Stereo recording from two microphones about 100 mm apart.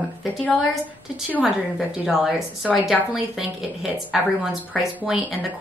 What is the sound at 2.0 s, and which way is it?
Speech, 5° right (ahead or behind).